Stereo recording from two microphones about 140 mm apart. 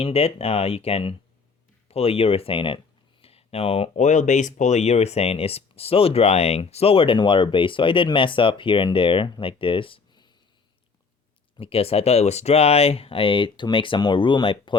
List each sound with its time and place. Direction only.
0.0 s speech: 45° left (ahead or behind)
11.5 s speech: 45° left (ahead or behind)